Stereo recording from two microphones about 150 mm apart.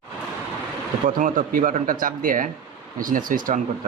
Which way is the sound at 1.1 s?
60° right (ahead or behind).